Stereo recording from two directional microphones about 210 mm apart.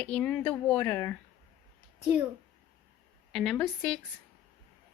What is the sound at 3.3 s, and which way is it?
Speech, centre (ahead or behind).